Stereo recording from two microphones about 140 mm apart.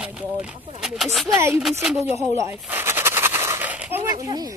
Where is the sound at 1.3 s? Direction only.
20° right (ahead or behind).